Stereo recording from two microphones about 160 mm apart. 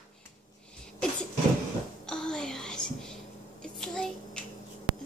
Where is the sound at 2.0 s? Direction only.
5° left (ahead or behind).